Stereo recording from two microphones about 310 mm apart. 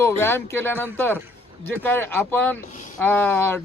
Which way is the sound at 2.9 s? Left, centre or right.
Centre.